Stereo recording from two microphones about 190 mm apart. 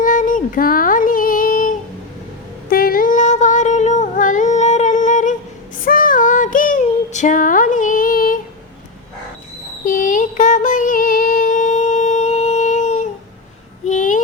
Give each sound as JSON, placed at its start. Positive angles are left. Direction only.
{"t": 0.0, "sound": "child singing", "side_deg": 45}
{"t": 2.6, "sound": "humming", "side_deg": 50}
{"t": 9.8, "sound": "music", "side_deg": 45}
{"t": 13.8, "sound": "a sound", "side_deg": 40}